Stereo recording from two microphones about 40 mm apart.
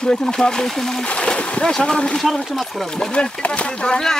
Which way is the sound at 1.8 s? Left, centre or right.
Left.